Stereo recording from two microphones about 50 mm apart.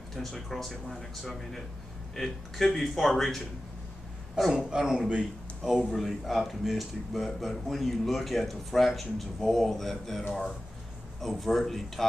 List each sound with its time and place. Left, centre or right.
0.1 s speech: centre
4.6 s speech: centre
5.9 s speech: centre